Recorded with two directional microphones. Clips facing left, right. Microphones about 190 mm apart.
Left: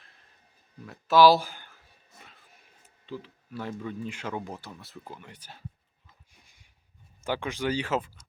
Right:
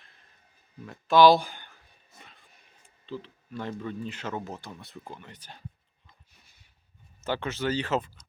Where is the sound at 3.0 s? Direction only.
10° left (ahead or behind).